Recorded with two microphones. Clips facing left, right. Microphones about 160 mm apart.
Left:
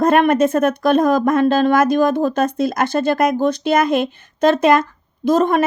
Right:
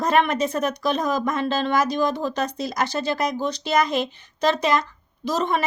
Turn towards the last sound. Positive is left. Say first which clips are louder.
# left 8 dB
turn(degrees=50)  # may be behind; listen again after turning